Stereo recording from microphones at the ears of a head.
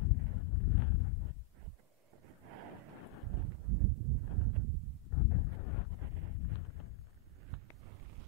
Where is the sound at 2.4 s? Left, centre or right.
Right.